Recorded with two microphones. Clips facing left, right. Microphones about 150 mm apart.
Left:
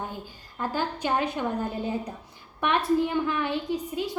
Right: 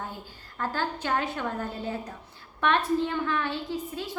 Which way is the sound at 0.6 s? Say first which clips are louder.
Left 2 dB; 15° left (ahead or behind).